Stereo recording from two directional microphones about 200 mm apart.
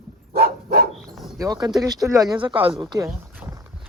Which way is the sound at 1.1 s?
Centre (ahead or behind).